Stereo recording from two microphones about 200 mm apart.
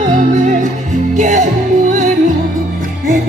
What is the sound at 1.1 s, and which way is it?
Music, 40° right (ahead or behind).